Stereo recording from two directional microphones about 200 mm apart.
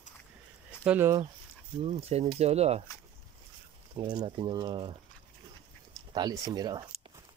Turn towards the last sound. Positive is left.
turn(degrees=-20)  # may be behind; listen again after turning